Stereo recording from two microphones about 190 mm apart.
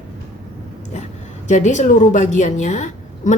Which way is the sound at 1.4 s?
40° left (ahead or behind).